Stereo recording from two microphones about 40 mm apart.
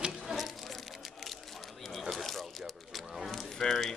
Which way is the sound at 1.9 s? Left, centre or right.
Centre.